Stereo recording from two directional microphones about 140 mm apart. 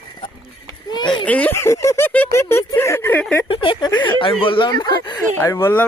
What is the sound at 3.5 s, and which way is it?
Speech, 40° left (ahead or behind).